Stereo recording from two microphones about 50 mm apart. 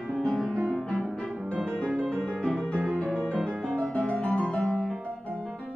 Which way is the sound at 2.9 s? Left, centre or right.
Left.